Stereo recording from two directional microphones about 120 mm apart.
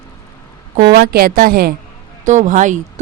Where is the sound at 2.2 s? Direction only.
90° right.